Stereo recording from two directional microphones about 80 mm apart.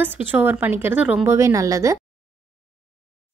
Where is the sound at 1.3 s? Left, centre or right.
Right.